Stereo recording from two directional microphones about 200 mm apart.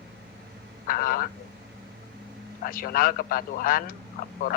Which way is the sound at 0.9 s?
45° left (ahead or behind).